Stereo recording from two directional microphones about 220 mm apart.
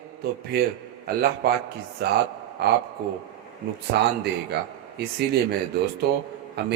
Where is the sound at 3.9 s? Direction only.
50° right (ahead or behind).